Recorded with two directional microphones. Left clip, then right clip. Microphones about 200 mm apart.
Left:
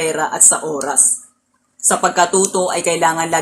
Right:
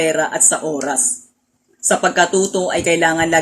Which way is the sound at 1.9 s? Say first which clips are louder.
Even; 15° right (ahead or behind).